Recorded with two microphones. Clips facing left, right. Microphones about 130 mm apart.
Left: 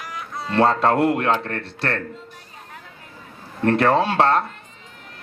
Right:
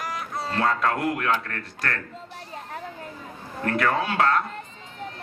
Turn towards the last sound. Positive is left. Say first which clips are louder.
# left 5 dB
turn(degrees=30)  # may be behind; listen again after turning